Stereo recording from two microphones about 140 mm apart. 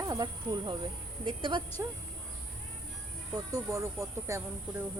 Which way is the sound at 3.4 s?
25° right (ahead or behind).